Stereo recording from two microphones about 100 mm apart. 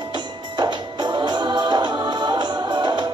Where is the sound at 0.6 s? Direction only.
50° right (ahead or behind).